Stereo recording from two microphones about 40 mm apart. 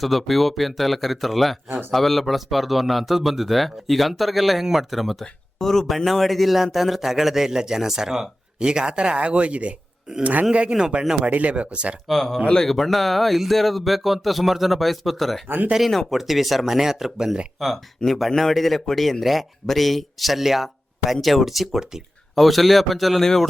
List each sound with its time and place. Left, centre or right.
0.0 s speech: centre
5.5 s a man's voice: centre; by 9.7 s right
10.7 s a man's voice: centre
11.2 s speech: right
12.0 s speech: centre
15.4 s speech: right
16.0 s a man's voice: centre
17.6 s speech: centre